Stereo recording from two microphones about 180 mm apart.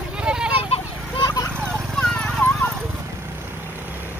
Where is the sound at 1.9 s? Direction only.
Centre (ahead or behind).